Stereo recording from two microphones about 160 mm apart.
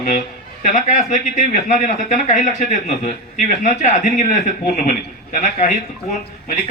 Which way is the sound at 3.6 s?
50° left (ahead or behind).